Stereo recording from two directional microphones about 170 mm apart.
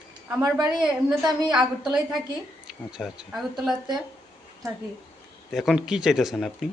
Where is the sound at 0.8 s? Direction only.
5° right (ahead or behind).